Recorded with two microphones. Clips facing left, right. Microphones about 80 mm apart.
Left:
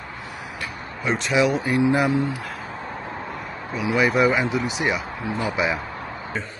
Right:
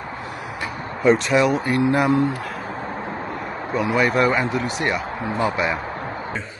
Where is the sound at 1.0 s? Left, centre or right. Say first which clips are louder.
Right 4 dB; centre.